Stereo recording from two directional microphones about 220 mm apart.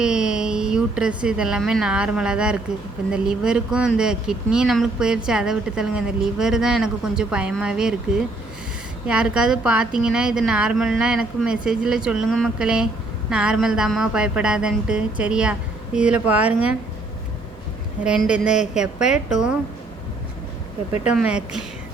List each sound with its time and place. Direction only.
0.0 s speech: 5° right (ahead or behind)
18.0 s speech: 5° right (ahead or behind)
18.4 s speech: 35° left (ahead or behind)
18.7 s speech: 5° right (ahead or behind)
21.1 s speech: 5° right (ahead or behind)